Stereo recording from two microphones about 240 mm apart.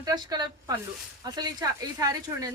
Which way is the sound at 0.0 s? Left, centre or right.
Centre.